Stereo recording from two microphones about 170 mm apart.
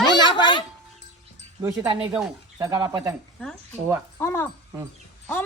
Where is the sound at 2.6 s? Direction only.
20° right (ahead or behind).